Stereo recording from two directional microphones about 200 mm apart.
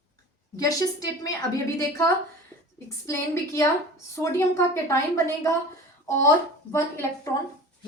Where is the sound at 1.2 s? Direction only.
15° left (ahead or behind).